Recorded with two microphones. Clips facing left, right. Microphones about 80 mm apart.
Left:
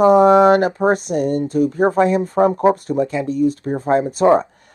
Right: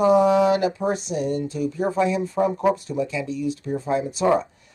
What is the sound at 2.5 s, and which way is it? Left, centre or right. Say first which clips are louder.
Speech: left 6 dB; left.